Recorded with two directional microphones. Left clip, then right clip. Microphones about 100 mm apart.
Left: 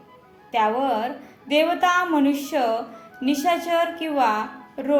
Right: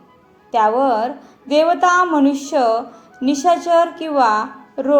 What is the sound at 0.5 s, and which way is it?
A woman's voice, 25° right (ahead or behind).